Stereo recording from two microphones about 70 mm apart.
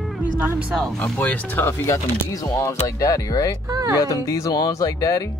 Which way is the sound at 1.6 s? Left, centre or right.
Left.